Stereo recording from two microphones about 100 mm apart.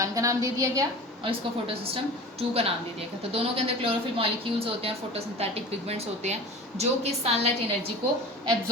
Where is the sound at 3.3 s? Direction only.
70° right (ahead or behind).